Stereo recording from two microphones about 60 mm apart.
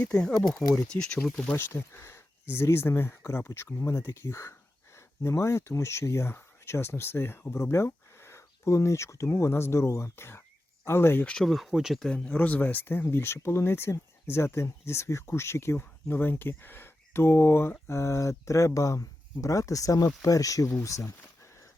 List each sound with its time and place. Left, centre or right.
0.0 s speech: centre
0.6 s speech: left
1.5 s speech: left
11.4 s speech: centre
12.0 s speech: centre; by 15.8 s left
15.8 s speech: left
20.8 s speech: left